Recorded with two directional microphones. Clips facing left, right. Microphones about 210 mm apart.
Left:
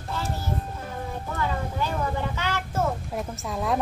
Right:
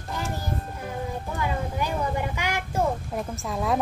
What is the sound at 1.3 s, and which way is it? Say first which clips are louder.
Child singing: left 1 dB; 15° right (ahead or behind).